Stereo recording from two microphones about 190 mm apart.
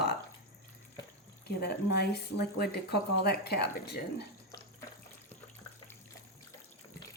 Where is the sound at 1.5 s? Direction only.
60° left (ahead or behind).